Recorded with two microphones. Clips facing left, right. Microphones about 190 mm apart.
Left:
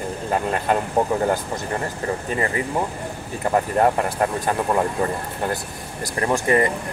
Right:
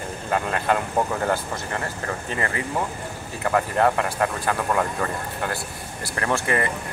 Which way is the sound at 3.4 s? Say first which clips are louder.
Left 2 dB; 25° left (ahead or behind).